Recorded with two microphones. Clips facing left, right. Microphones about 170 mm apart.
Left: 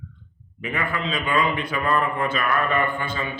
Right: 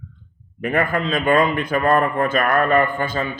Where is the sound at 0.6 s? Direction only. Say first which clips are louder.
Right 7 dB; 50° right (ahead or behind).